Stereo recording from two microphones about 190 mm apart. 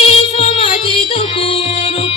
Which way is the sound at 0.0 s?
30° left (ahead or behind).